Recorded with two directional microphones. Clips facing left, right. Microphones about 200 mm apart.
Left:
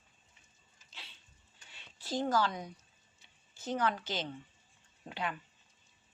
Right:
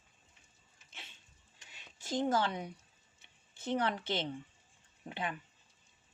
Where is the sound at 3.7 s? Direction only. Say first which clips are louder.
Even; 25° right (ahead or behind).